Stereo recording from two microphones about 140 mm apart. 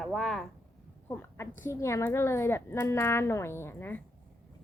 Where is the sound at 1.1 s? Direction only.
15° left (ahead or behind).